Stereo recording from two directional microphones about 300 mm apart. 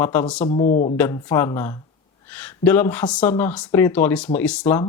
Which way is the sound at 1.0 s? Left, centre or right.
Centre.